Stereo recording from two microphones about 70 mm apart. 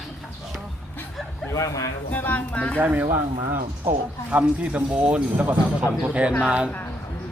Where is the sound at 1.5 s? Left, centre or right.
Left.